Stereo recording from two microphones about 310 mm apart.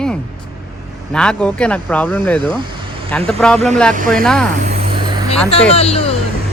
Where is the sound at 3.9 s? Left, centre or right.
Right.